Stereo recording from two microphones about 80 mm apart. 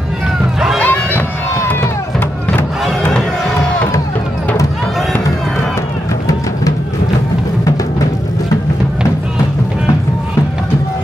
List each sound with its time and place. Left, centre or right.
0.7 s music: left